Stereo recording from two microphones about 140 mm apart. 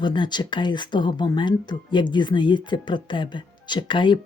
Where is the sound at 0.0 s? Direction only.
30° left (ahead or behind).